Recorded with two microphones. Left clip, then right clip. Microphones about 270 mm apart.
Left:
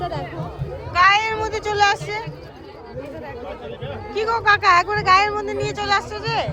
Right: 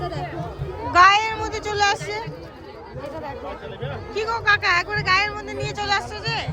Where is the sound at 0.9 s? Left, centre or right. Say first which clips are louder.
Right 1 dB; right.